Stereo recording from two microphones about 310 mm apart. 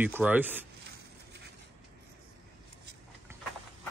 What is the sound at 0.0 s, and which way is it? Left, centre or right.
Speech, centre.